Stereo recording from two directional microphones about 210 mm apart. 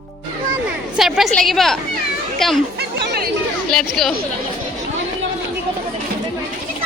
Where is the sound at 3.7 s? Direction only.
Centre (ahead or behind).